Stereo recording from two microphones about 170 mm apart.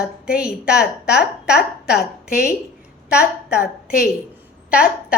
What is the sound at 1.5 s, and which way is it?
Speech, 75° left (ahead or behind).